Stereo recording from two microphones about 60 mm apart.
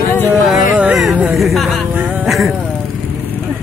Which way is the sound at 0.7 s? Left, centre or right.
Right.